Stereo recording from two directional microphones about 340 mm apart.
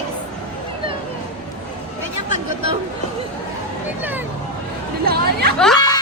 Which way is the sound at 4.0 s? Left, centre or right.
Centre.